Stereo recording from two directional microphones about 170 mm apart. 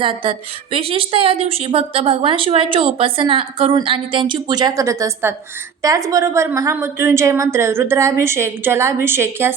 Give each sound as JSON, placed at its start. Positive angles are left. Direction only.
{"t": 0.0, "sound": "a woman's voice", "side_deg": -30}